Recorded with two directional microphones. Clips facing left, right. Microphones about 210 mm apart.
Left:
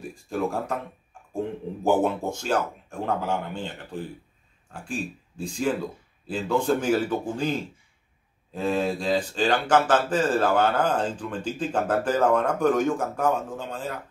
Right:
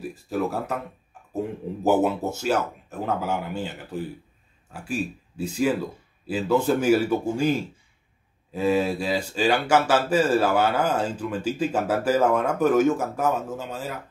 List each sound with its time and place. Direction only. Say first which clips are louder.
0.0 s speech: right 1 dB; 5° right (ahead or behind)